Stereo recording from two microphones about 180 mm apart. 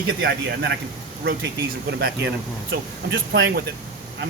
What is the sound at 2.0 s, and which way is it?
Speech, 70° right (ahead or behind).